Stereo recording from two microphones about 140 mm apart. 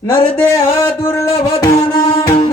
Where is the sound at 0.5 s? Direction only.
20° left (ahead or behind).